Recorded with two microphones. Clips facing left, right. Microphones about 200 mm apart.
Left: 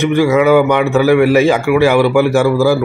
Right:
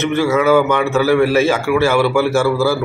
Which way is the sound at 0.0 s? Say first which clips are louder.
Left 4 dB; 15° left (ahead or behind).